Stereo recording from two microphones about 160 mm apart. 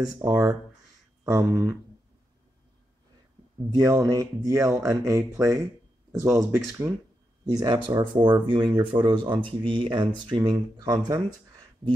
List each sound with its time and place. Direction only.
0.0 s speech: 20° right (ahead or behind)
3.7 s speech: 20° right (ahead or behind)